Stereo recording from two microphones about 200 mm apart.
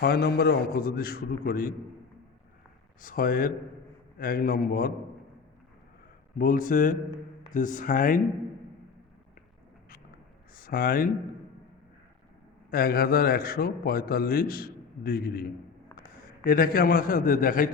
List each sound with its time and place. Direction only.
0.0 s a man's voice: 50° left (ahead or behind)
3.0 s a man's voice: 45° left (ahead or behind)
6.4 s a man's voice: 45° left (ahead or behind)
10.5 s speech: 45° left (ahead or behind)
12.7 s a man's voice: 50° left (ahead or behind)